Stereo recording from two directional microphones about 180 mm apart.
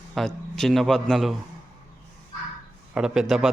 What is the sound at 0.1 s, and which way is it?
A man's voice, centre (ahead or behind).